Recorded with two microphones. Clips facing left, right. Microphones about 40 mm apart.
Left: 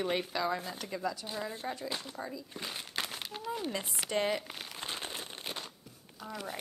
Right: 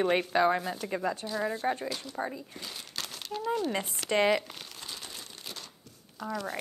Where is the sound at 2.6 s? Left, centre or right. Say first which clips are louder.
Left 5 dB; left.